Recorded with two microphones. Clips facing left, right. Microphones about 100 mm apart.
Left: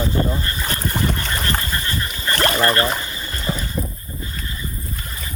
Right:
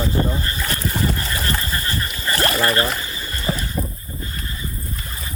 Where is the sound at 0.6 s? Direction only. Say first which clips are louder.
Even; 30° left (ahead or behind).